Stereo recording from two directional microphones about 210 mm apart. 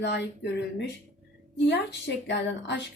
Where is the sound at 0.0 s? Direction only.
55° left (ahead or behind).